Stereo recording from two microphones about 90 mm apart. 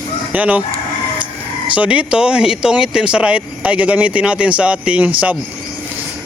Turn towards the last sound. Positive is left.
turn(degrees=-15)  # may be behind; listen again after turning